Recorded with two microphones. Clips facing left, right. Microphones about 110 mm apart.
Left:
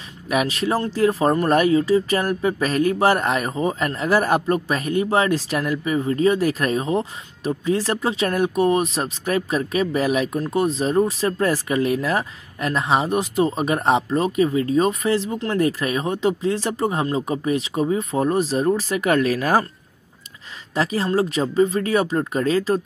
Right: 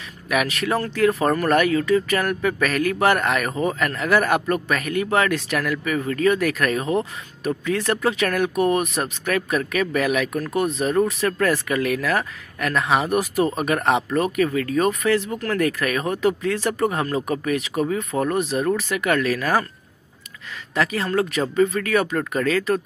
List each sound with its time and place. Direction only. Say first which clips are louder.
0.3 s speech: left 1 dB; 30° left (ahead or behind)
20.7 s speech: left 1 dB; 35° left (ahead or behind)